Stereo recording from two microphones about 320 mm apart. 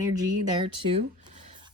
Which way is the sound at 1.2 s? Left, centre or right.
Centre.